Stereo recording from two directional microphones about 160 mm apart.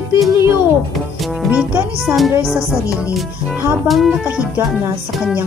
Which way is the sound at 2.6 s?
15° left (ahead or behind).